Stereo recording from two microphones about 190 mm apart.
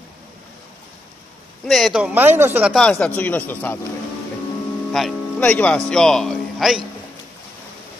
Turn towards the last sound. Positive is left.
turn(degrees=0)  # may be behind; listen again after turning